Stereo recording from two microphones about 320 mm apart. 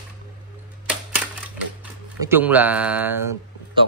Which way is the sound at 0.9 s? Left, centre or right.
Centre.